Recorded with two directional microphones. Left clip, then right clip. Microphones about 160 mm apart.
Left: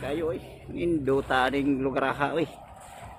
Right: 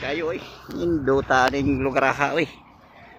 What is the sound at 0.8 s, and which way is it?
Speech, 50° right (ahead or behind).